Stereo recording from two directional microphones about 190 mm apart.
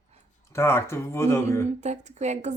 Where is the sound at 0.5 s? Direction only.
15° left (ahead or behind).